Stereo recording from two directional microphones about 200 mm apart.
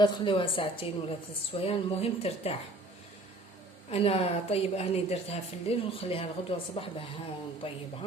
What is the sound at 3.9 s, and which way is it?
A woman's voice, 30° left (ahead or behind).